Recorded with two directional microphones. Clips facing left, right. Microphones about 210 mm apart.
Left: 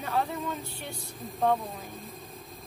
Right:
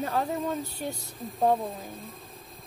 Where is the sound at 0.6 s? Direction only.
40° right (ahead or behind).